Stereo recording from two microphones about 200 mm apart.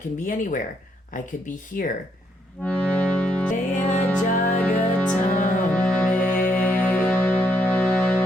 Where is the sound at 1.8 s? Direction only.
45° left (ahead or behind).